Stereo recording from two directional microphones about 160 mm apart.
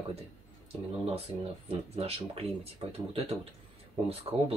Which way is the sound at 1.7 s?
40° right (ahead or behind).